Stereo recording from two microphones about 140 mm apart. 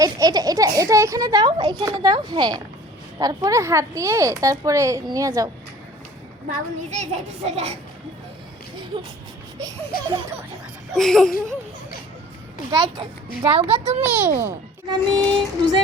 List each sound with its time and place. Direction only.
0.0 s a child's voice: 25° right (ahead or behind)
2.0 s a sound: 30° right (ahead or behind)
3.2 s speech: 25° right (ahead or behind)
6.9 s a child's voice: 55° right (ahead or behind)
9.9 s baby laughter: 90° left
10.9 s speech: 5° left (ahead or behind)
12.7 s a child's voice: 35° right (ahead or behind)
14.0 s a child's voice: 15° right (ahead or behind)
14.8 s a sound: 35° right (ahead or behind)